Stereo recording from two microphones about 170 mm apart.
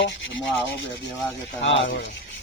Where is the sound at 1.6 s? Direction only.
90° left.